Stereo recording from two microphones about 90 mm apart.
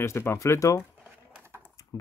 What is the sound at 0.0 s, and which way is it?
Speech, 25° left (ahead or behind).